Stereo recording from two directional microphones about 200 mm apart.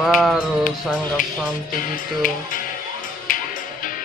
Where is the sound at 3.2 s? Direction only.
40° left (ahead or behind).